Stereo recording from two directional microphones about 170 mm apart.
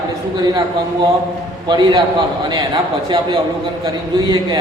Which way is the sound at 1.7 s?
25° right (ahead or behind).